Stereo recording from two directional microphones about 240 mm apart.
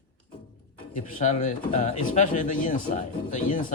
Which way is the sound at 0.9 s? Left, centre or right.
Left.